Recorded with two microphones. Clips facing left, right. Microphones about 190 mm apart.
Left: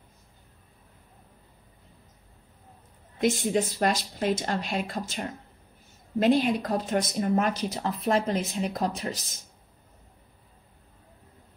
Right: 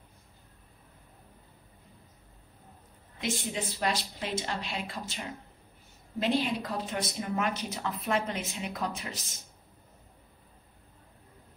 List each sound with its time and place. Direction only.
3.2 s speech: 45° left (ahead or behind)